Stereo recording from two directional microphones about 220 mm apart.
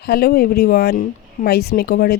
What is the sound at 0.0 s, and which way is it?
Speech, 45° left (ahead or behind).